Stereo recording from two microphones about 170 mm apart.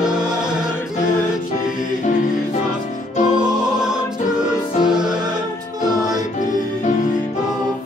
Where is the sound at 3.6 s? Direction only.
5° right (ahead or behind).